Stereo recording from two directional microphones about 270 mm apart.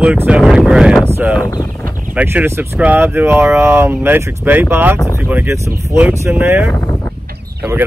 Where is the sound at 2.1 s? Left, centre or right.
Centre.